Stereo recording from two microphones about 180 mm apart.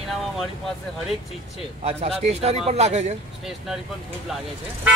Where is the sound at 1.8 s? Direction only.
35° right (ahead or behind).